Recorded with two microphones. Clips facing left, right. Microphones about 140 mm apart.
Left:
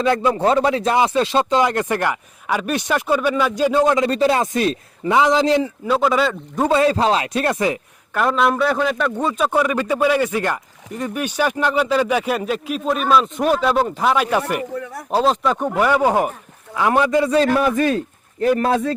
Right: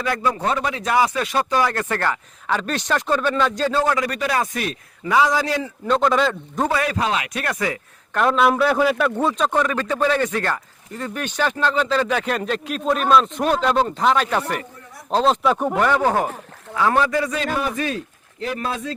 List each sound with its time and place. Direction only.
0.0 s speech: 25° left (ahead or behind)
5.8 s speech: 5° left (ahead or behind)
6.7 s speech: 25° left (ahead or behind)
8.1 s a man's voice: centre (ahead or behind)
15.8 s a man's voice: 10° left (ahead or behind)
17.5 s a man's voice: 50° left (ahead or behind)